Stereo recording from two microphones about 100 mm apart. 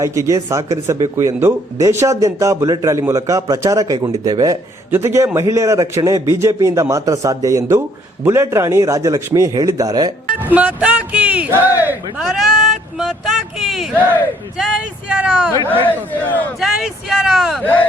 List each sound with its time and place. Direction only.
0.0 s a man's voice: 30° right (ahead or behind)
4.9 s a man's voice: 25° right (ahead or behind)
10.4 s speech: 15° right (ahead or behind)
12.2 s speech: centre (ahead or behind)
13.0 s a sound: centre (ahead or behind)
15.1 s speech: 10° right (ahead or behind)
15.7 s a man's voice: 20° left (ahead or behind)
16.6 s speech: centre (ahead or behind)
17.6 s a man's voice: 15° left (ahead or behind)